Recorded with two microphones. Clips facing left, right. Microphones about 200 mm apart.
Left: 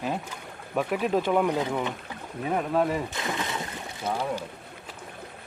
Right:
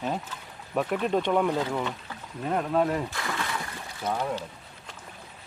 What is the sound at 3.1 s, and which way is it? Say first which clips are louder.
Splash: left 1 dB; 20° left (ahead or behind).